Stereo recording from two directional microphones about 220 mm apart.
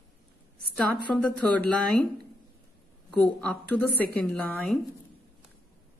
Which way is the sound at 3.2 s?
5° left (ahead or behind).